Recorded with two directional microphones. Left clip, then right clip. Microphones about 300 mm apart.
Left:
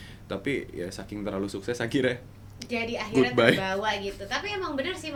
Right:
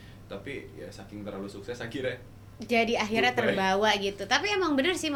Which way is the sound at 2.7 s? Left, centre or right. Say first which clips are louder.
Right 3 dB; right.